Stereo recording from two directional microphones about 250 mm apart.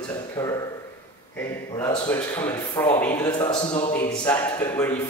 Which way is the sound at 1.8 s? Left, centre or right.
Centre.